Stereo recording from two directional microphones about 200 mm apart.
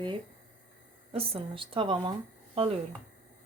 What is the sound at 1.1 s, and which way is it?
Speech, 30° right (ahead or behind).